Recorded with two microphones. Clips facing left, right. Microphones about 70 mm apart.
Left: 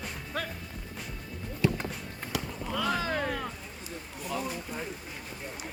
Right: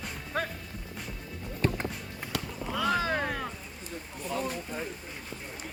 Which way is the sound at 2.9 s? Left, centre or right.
Right.